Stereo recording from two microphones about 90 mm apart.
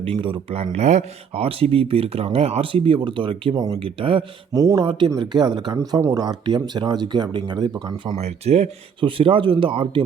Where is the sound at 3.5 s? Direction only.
45° right (ahead or behind).